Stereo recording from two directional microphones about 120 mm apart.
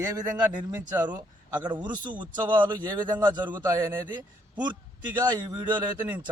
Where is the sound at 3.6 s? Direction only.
30° right (ahead or behind).